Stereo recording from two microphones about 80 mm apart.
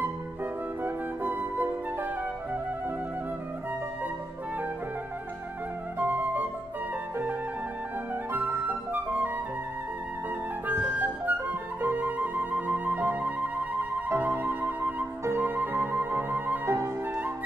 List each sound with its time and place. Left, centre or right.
0.8 s flute: right
5.9 s flute: right
8.3 s flute: right
10.7 s flute: right
14.0 s music: right
16.7 s flute: right